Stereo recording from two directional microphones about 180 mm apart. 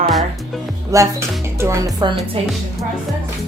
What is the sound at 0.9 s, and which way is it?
Speech, 15° right (ahead or behind).